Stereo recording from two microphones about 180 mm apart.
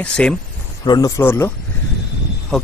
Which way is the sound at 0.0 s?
5° left (ahead or behind).